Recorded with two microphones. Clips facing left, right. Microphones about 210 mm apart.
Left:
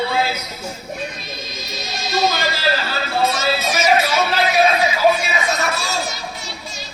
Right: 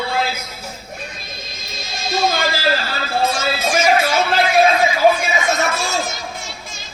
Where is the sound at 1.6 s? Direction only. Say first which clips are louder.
Right 1 dB; 50° right (ahead or behind).